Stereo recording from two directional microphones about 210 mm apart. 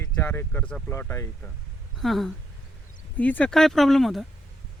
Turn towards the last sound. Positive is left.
turn(degrees=0)  # may be behind; listen again after turning